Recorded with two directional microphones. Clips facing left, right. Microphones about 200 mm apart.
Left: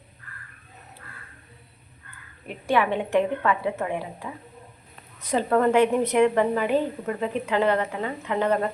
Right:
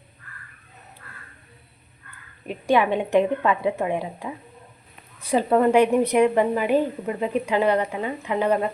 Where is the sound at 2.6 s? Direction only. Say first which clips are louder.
Right 3 dB; 15° right (ahead or behind).